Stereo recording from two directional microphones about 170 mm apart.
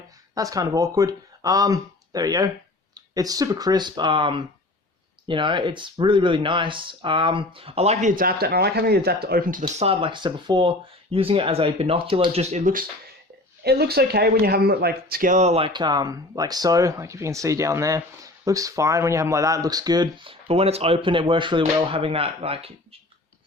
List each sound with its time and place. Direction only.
0.3 s speech: 20° right (ahead or behind); by 8.1 s 35° right (ahead or behind)
8.1 s speech: 60° right (ahead or behind)
9.8 s speech: 35° right (ahead or behind)
13.7 s speech: 65° right (ahead or behind); by 23.0 s 35° right (ahead or behind)